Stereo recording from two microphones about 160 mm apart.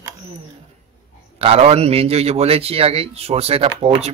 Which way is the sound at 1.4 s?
40° right (ahead or behind).